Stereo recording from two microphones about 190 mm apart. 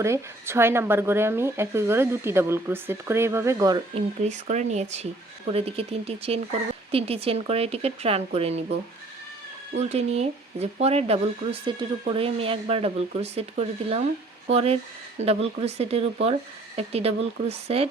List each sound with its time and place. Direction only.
0.0 s speech: 15° right (ahead or behind)
4.2 s speech: 40° right (ahead or behind)
9.7 s speech: 35° right (ahead or behind)